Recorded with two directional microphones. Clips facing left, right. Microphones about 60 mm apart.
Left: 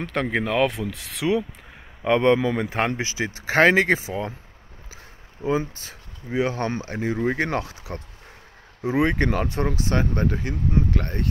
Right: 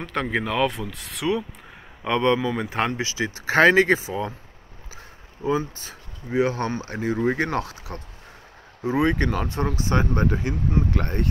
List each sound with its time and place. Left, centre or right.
0.0 s speech: left
3.2 s speech: centre
5.4 s speech: centre
9.9 s speech: centre
10.9 s speech: right